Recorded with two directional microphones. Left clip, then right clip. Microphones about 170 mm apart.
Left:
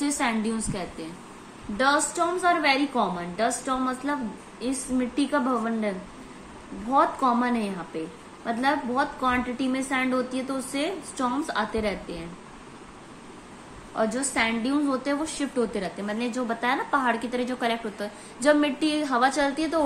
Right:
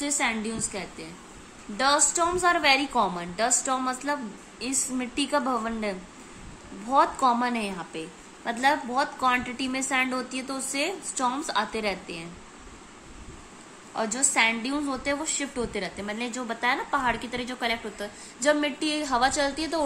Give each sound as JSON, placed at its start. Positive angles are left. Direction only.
{"t": 0.0, "sound": "a woman's voice", "side_deg": -10}
{"t": 13.9, "sound": "a woman's voice", "side_deg": -10}